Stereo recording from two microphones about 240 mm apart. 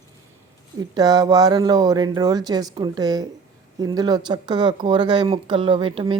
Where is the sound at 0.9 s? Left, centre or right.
Centre.